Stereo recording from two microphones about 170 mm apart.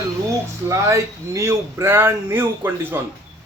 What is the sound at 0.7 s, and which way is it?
Speech, 15° right (ahead or behind).